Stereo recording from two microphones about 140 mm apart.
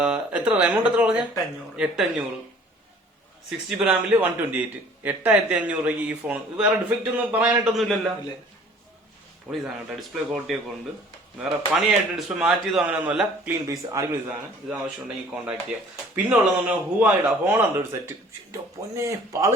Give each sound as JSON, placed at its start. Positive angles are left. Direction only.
{"t": 0.0, "sound": "a man's voice", "side_deg": -5}
{"t": 3.7, "sound": "a man's voice", "side_deg": -10}
{"t": 7.6, "sound": "a man's voice", "side_deg": 0}
{"t": 9.5, "sound": "a man's voice", "side_deg": 0}
{"t": 11.7, "sound": "a man's voice", "side_deg": -5}
{"t": 13.7, "sound": "a man's voice", "side_deg": -20}
{"t": 14.7, "sound": "a man's voice", "side_deg": -10}